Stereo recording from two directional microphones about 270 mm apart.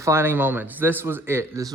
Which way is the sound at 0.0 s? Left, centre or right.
Centre.